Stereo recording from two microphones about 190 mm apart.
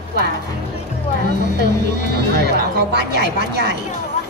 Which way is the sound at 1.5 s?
60° right (ahead or behind).